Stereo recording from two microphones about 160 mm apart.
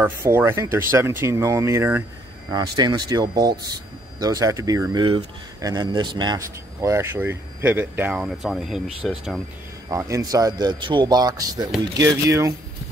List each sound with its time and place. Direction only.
0.0 s speech: 15° right (ahead or behind)
2.5 s speech: 25° right (ahead or behind); by 9.4 s centre (ahead or behind)
9.8 s speech: 20° right (ahead or behind)